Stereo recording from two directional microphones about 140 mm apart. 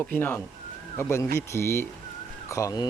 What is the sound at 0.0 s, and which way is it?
Speech, 15° left (ahead or behind).